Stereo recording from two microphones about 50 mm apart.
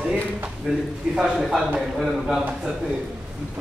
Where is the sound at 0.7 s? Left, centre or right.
Centre.